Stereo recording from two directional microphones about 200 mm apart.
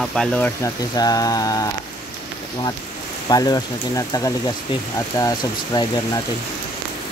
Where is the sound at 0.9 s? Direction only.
20° left (ahead or behind).